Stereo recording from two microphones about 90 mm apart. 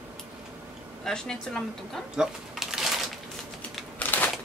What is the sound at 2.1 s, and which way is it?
Typewriter, 5° right (ahead or behind).